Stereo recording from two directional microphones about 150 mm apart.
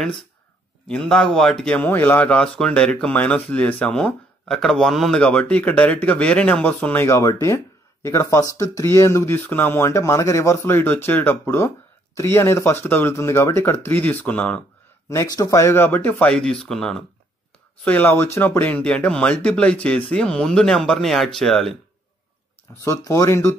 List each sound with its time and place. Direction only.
0.8 s speech: 5° left (ahead or behind)
15.3 s speech: 20° left (ahead or behind); by 21.7 s 5° left (ahead or behind)
22.8 s speech: 20° left (ahead or behind)